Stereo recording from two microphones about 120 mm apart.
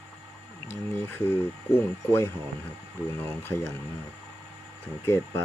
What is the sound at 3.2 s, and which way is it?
Speech, 20° left (ahead or behind).